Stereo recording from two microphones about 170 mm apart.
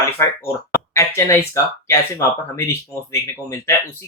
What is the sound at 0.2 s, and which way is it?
Speech, 15° left (ahead or behind).